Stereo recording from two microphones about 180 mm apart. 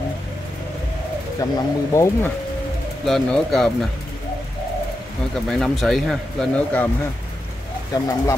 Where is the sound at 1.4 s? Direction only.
20° left (ahead or behind).